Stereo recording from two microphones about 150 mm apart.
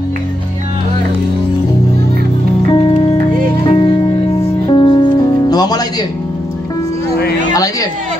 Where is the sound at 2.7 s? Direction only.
35° left (ahead or behind).